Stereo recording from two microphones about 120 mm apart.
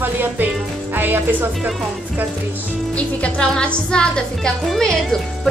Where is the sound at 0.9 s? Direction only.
15° right (ahead or behind).